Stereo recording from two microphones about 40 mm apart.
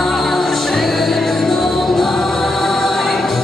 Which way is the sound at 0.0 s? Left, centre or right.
Centre.